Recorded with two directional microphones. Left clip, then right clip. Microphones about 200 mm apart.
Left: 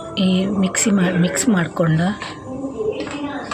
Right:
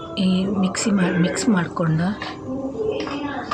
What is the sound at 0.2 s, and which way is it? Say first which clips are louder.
A woman's voice: left 3 dB; 10° left (ahead or behind).